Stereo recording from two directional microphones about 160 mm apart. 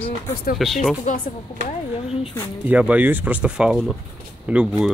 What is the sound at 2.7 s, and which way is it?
Speech, 10° right (ahead or behind).